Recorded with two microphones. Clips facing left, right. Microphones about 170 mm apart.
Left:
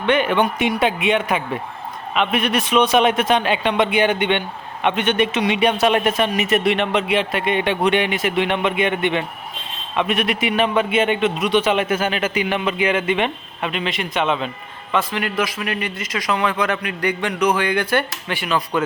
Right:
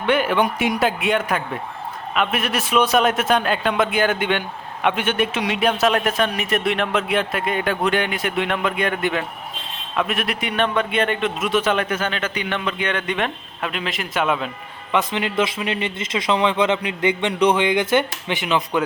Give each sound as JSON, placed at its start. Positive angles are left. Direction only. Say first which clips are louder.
{"t": 0.0, "sound": "a man's voice", "louder": "left 1 dB", "side_deg": -5}
{"t": 14.9, "sound": "a man's voice", "louder": "right 1 dB", "side_deg": -20}